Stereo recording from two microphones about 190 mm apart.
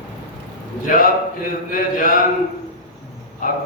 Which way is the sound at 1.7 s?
45° left (ahead or behind).